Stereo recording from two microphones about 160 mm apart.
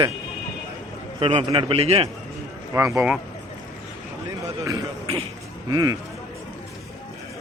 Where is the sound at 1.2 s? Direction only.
30° right (ahead or behind).